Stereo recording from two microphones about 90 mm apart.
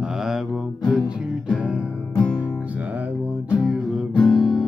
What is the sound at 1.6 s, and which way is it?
Music, 15° right (ahead or behind).